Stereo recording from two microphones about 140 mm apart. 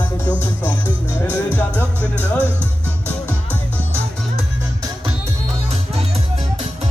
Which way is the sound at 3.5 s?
15° right (ahead or behind).